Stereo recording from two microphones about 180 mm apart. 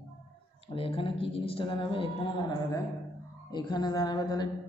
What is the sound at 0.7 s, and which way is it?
A man's voice, 30° left (ahead or behind).